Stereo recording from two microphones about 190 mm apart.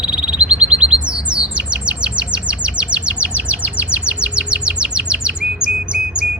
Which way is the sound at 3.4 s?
5° right (ahead or behind).